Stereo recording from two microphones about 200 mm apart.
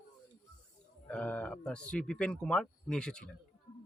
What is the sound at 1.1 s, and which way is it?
Speech, 5° left (ahead or behind).